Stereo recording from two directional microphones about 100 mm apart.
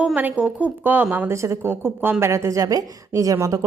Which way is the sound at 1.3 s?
30° right (ahead or behind).